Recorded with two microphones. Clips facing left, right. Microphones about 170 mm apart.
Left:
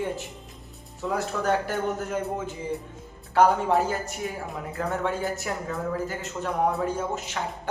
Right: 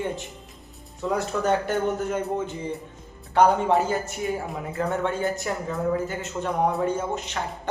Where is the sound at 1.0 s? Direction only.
Centre (ahead or behind).